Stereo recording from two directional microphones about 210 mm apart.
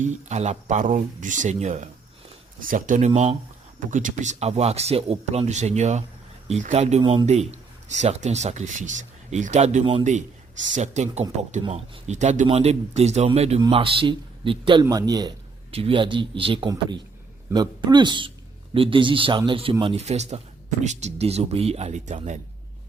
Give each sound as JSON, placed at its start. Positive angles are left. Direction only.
{"t": 0.0, "sound": "speech", "side_deg": -35}
{"t": 3.1, "sound": "speech", "side_deg": -25}
{"t": 3.9, "sound": "speech", "side_deg": -35}